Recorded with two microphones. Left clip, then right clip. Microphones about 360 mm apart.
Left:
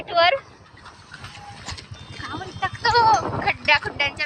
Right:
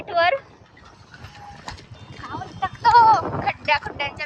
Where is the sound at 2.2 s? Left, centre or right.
Centre.